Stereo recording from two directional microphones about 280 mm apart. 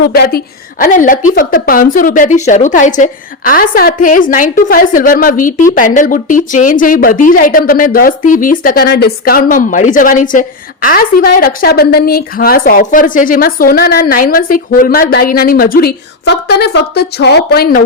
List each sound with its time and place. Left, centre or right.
0.0 s a woman's voice: left